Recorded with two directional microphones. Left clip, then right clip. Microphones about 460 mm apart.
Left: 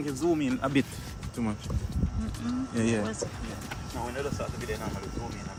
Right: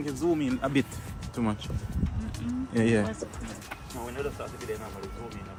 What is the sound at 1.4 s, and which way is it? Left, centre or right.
Speech, centre.